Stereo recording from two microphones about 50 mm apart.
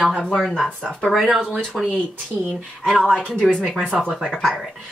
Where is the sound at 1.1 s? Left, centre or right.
Centre.